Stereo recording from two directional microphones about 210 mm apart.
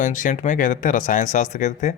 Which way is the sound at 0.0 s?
35° left (ahead or behind).